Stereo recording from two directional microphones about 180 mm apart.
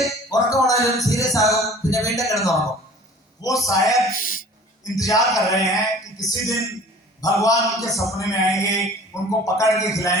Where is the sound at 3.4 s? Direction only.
20° left (ahead or behind).